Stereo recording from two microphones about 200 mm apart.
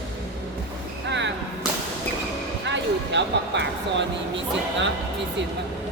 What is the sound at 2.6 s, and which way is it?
Speech, 60° right (ahead or behind).